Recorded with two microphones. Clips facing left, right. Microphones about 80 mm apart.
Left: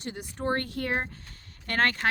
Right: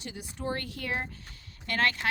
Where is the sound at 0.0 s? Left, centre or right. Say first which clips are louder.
Left 4 dB; left.